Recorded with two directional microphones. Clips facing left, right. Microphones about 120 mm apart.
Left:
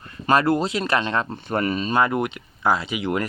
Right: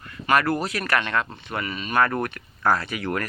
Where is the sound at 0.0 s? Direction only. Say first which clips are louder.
Left 2 dB; 30° left (ahead or behind).